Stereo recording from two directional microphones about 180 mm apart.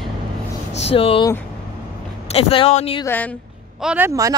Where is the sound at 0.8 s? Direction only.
30° left (ahead or behind).